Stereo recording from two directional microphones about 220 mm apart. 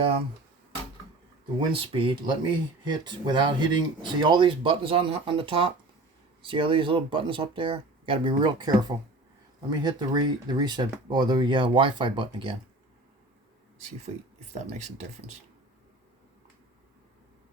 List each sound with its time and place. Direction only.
1.9 s speech: 25° right (ahead or behind)
13.7 s speech: 30° right (ahead or behind)